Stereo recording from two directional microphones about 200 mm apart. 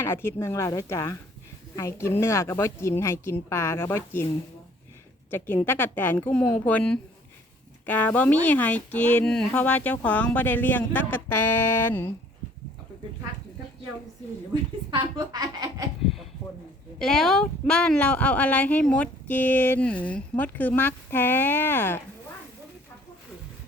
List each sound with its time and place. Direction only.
0.0 s speech: 10° left (ahead or behind)
5.3 s speech: 10° left (ahead or behind)
14.8 s a woman's voice: 20° right (ahead or behind)
17.0 s speech: centre (ahead or behind)